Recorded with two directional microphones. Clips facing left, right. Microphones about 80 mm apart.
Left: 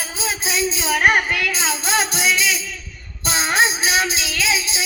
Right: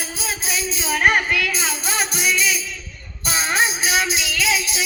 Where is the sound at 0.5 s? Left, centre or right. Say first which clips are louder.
Left 4 dB; left.